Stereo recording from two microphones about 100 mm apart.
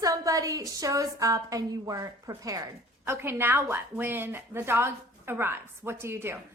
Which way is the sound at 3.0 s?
25° right (ahead or behind).